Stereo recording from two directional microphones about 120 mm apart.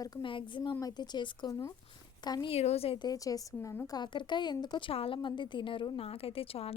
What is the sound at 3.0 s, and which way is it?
A woman's voice, 30° left (ahead or behind).